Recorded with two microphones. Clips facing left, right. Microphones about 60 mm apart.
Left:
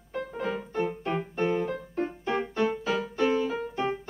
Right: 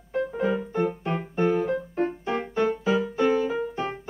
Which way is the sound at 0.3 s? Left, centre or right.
Centre.